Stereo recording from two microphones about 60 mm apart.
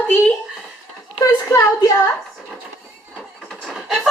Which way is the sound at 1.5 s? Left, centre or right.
Left.